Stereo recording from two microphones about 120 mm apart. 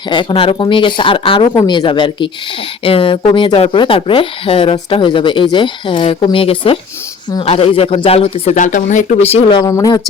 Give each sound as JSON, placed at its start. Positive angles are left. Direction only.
{"t": 0.1, "sound": "speech", "side_deg": 40}
{"t": 8.5, "sound": "speech", "side_deg": 90}
{"t": 9.5, "sound": "speech", "side_deg": 35}